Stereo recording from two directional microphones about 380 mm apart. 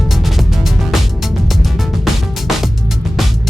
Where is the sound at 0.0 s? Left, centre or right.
Centre.